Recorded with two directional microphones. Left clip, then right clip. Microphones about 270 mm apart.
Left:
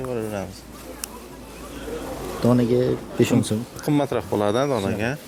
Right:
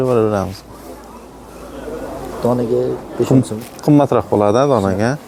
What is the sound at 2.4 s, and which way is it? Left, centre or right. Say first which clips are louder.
Speech: right 4 dB; left.